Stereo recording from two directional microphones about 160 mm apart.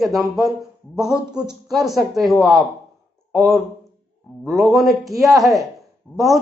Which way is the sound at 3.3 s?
20° right (ahead or behind).